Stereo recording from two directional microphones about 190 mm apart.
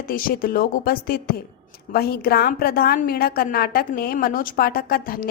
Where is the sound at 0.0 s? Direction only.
50° left (ahead or behind).